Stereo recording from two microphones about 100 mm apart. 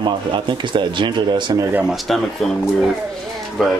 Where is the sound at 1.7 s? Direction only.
15° right (ahead or behind).